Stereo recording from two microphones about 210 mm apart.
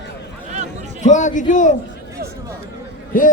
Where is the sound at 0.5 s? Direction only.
35° right (ahead or behind).